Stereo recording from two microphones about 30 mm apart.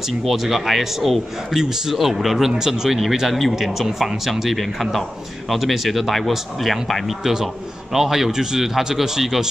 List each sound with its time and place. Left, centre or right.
0.0 s a man's voice: centre
2.5 s speech: centre
2.9 s a man's voice: centre
7.9 s speech: centre